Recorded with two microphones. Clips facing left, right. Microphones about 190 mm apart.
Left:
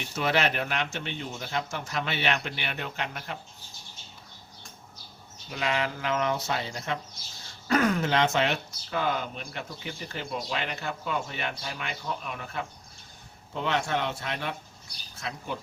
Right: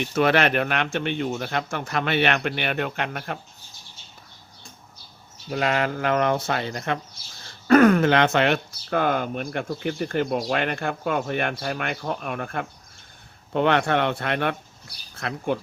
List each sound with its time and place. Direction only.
0.0 s speech: 60° right (ahead or behind)
5.5 s speech: 50° right (ahead or behind)